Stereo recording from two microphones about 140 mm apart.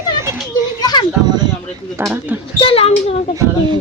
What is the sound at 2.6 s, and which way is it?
Speech, 40° left (ahead or behind).